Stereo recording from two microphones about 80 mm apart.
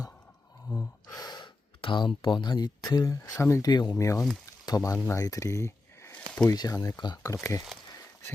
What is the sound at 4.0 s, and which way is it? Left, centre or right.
Speech, left.